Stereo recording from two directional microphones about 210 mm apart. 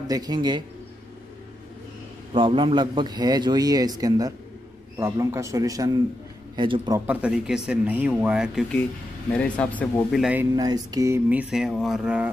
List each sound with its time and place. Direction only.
0.1 s a man's voice: 20° right (ahead or behind)
2.3 s a man's voice: 25° right (ahead or behind)
4.9 s a sound: 10° right (ahead or behind)
6.5 s a man's voice: 20° right (ahead or behind)
7.1 s speech: 5° right (ahead or behind)
10.5 s a sound: 20° right (ahead or behind)